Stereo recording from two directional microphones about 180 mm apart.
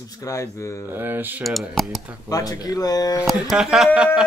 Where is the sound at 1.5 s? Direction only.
Centre (ahead or behind).